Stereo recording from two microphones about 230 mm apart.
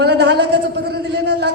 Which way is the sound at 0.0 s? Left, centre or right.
Right.